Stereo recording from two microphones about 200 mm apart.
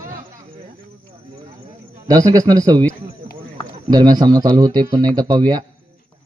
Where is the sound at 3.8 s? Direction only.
20° right (ahead or behind).